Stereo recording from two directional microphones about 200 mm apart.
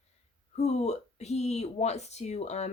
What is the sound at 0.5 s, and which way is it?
Speech, 35° left (ahead or behind).